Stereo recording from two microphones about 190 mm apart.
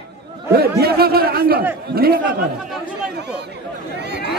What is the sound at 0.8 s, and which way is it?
A man's voice, 55° right (ahead or behind).